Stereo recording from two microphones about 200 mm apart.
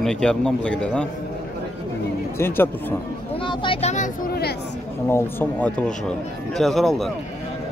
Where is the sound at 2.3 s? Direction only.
10° left (ahead or behind).